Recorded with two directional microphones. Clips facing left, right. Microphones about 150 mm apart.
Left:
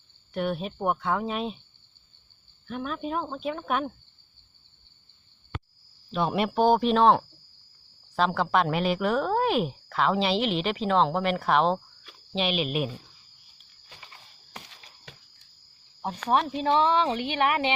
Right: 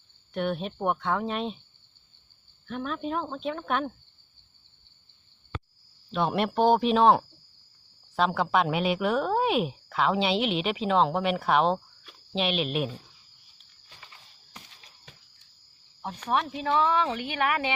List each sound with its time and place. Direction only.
0.3 s speech: 5° left (ahead or behind)
2.6 s speech: 5° left (ahead or behind)
6.1 s speech: centre (ahead or behind)
14.5 s a sound: 80° left
16.3 s speech: 30° left (ahead or behind)